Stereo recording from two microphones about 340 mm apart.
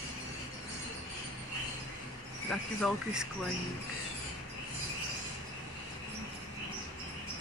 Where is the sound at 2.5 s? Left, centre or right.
Centre.